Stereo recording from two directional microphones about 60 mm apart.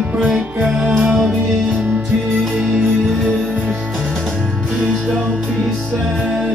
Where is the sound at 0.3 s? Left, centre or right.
Centre.